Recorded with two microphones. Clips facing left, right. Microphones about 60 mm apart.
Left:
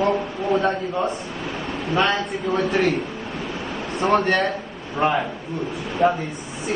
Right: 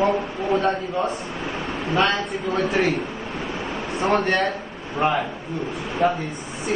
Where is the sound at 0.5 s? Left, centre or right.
Centre.